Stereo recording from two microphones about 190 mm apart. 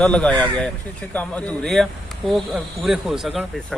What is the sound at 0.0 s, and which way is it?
A man's voice, 5° left (ahead or behind).